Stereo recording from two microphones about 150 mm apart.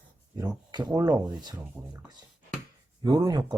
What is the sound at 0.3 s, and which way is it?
Speech, 25° right (ahead or behind).